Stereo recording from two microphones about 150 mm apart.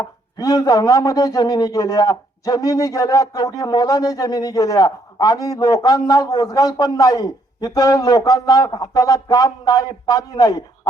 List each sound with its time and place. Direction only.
0.0 s a man's voice: 25° left (ahead or behind)